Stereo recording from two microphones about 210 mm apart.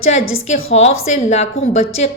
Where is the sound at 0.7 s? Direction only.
30° left (ahead or behind).